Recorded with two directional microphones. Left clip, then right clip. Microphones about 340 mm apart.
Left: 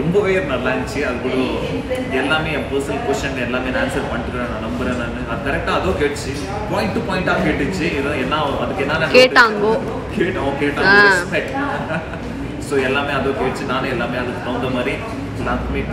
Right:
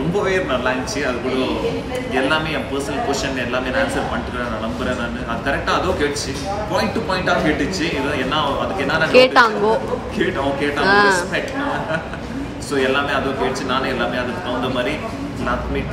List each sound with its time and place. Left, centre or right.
9.1 s speech: centre
10.8 s speech: centre